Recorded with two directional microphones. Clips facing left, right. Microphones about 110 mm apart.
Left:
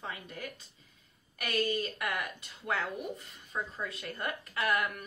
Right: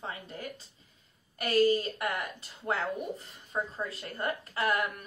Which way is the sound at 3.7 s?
30° right (ahead or behind).